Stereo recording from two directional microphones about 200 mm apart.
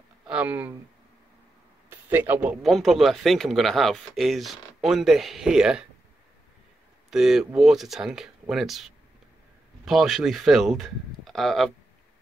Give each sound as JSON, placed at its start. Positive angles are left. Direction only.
{"t": 0.3, "sound": "speech", "side_deg": -10}
{"t": 1.9, "sound": "a man's voice", "side_deg": -10}
{"t": 7.1, "sound": "speech", "side_deg": 0}